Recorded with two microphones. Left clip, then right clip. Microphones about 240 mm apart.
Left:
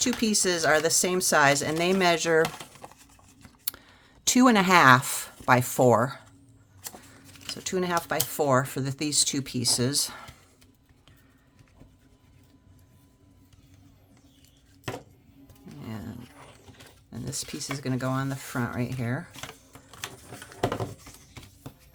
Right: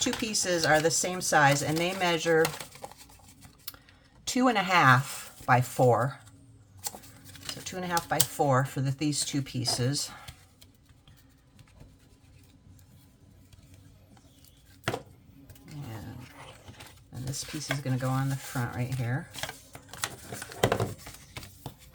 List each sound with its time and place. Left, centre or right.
0.0 s speech: left
2.6 s computer keyboard: centre
4.2 s speech: left
7.6 s speech: left
17.3 s speech: left